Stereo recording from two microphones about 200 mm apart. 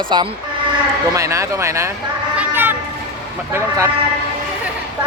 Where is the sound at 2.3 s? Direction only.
10° right (ahead or behind).